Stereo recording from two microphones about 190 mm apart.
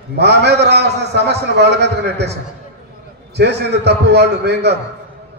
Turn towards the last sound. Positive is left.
turn(degrees=-60)  # may be behind; listen again after turning